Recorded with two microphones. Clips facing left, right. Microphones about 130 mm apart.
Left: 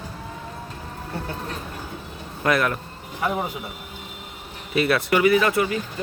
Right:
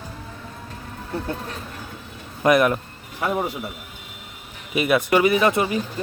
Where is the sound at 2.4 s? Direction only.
20° right (ahead or behind).